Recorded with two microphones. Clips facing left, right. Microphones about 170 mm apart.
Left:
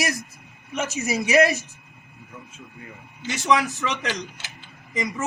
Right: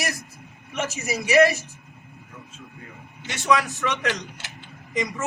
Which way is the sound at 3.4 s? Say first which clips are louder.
Even; 20° left (ahead or behind).